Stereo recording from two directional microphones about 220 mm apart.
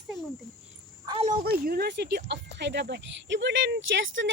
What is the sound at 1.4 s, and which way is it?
Speech, 45° right (ahead or behind).